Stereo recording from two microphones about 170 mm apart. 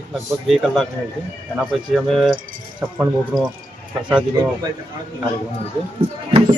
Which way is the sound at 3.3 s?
10° right (ahead or behind).